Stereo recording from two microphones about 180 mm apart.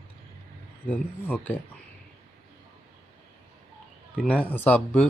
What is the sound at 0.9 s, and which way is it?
Speech, 10° left (ahead or behind).